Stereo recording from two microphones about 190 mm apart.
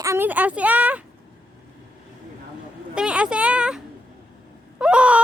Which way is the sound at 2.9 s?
5° right (ahead or behind).